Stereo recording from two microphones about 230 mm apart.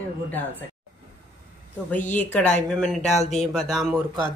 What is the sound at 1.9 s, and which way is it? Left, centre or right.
Speech, left.